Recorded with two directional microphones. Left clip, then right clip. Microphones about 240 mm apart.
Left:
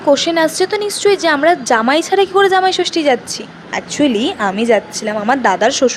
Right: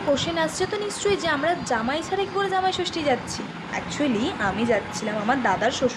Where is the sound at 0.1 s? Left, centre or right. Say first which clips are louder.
Left 11 dB; left.